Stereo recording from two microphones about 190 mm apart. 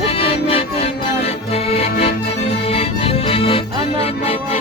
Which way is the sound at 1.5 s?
35° left (ahead or behind).